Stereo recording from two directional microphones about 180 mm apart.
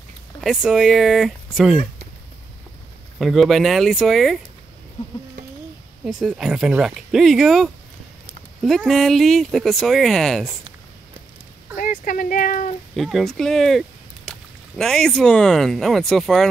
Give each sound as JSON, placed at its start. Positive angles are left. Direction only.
{"t": 0.4, "sound": "speech", "side_deg": 0}
{"t": 3.2, "sound": "speech", "side_deg": 0}
{"t": 6.2, "sound": "speech", "side_deg": -5}
{"t": 11.7, "sound": "speech", "side_deg": 50}
{"t": 12.9, "sound": "speech", "side_deg": 0}